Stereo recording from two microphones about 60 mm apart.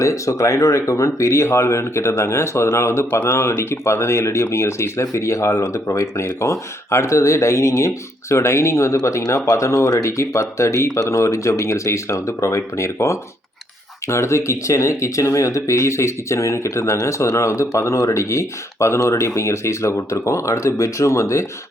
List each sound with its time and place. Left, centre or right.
0.0 s speech: left